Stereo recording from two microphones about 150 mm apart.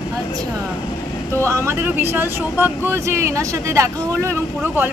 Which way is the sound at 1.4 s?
20° right (ahead or behind).